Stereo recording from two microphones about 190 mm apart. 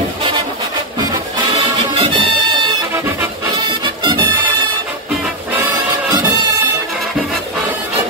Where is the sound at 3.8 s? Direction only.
25° right (ahead or behind).